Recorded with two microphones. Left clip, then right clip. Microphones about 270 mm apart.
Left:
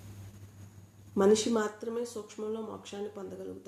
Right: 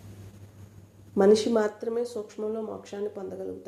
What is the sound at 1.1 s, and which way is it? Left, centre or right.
Speech, centre.